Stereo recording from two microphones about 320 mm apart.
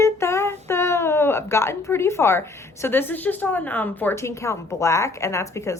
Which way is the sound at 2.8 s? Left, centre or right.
Centre.